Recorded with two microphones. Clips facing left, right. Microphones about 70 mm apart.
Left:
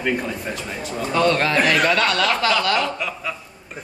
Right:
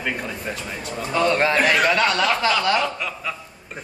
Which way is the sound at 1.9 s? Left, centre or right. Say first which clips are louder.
Even; centre.